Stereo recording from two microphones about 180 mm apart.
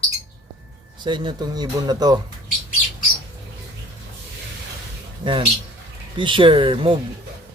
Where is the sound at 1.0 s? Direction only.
25° right (ahead or behind).